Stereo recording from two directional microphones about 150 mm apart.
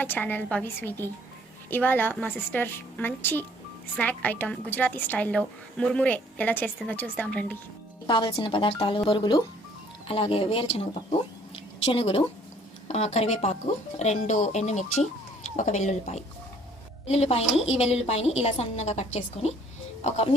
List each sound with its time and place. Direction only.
0.0 s a woman's voice: 10° left (ahead or behind)
8.0 s speech: 30° left (ahead or behind)
11.9 s a woman's voice: 40° left (ahead or behind)